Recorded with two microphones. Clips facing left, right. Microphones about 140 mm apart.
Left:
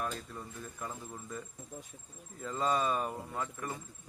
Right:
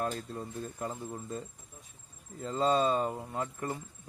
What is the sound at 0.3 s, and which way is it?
Speech, 25° right (ahead or behind).